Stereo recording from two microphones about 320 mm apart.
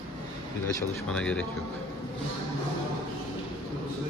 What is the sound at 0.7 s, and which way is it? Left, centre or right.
Speech, centre.